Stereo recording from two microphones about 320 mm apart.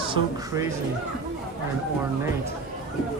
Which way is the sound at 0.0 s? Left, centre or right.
Centre.